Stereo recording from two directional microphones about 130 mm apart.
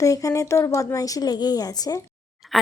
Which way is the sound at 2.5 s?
Centre (ahead or behind).